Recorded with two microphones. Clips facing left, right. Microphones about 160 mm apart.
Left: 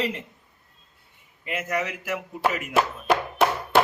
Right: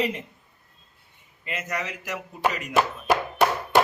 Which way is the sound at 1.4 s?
10° left (ahead or behind).